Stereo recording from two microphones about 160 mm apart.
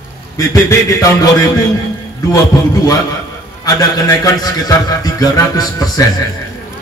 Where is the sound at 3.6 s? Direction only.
20° left (ahead or behind).